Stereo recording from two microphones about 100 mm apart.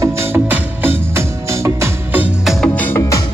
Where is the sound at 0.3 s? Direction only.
20° right (ahead or behind).